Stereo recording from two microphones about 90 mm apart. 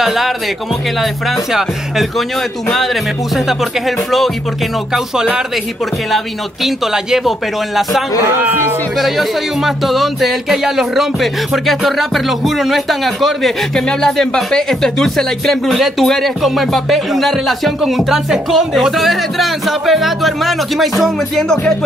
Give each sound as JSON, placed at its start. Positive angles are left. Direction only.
{"t": 0.0, "sound": "music", "side_deg": -5}
{"t": 1.3, "sound": "speech", "side_deg": -5}
{"t": 8.2, "sound": "a man's voice", "side_deg": -25}
{"t": 8.9, "sound": "speech", "side_deg": 0}